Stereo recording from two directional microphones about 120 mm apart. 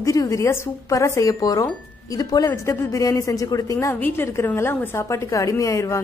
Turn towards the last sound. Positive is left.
turn(degrees=25)  # may be behind; listen again after turning